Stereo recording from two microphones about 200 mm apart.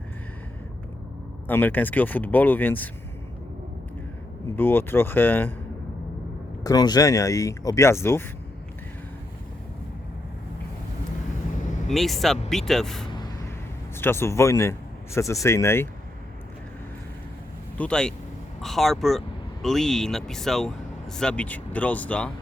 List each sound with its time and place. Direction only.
1.5 s speech: 10° left (ahead or behind)
4.5 s speech: 10° left (ahead or behind)
6.7 s speech: 20° left (ahead or behind)
11.9 s a man's voice: centre (ahead or behind)
17.7 s speech: 5° left (ahead or behind)